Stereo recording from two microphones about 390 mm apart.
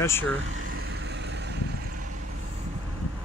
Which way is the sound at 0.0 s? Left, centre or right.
Centre.